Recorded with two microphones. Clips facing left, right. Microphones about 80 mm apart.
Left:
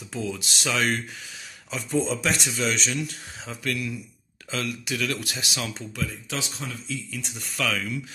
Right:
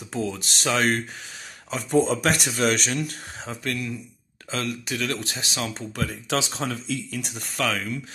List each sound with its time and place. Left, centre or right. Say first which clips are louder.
0.1 s speech: right 2 dB; right
3.4 s speech: even; right
5.9 s speech: right 6 dB; right